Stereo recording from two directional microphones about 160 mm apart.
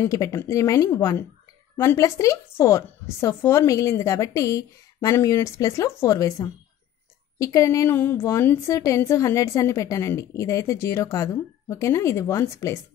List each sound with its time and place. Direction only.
0.0 s a woman's voice: 20° left (ahead or behind)